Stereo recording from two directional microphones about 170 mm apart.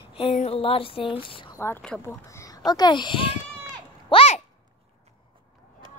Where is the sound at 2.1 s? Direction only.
20° left (ahead or behind); by 4.4 s 40° left (ahead or behind).